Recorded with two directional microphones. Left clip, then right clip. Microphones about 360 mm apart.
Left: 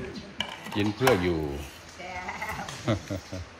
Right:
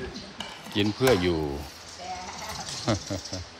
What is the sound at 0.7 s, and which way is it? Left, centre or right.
Speech, centre.